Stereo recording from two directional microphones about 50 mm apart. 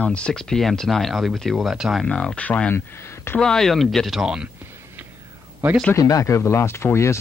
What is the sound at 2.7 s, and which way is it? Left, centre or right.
Speech, left.